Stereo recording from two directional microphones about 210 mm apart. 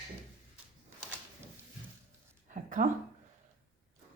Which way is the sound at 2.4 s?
35° right (ahead or behind).